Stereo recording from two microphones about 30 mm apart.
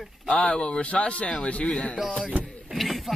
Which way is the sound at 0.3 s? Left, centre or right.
Left.